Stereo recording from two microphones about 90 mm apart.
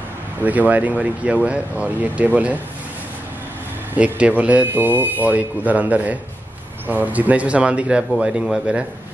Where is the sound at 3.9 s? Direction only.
15° right (ahead or behind).